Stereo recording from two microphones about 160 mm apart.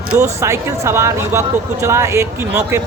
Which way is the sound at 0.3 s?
15° right (ahead or behind).